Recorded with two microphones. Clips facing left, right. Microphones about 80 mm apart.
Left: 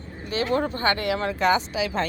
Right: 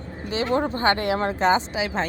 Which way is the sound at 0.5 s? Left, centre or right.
Right.